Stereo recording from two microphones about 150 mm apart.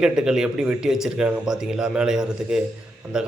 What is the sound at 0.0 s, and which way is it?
Speech, 5° right (ahead or behind).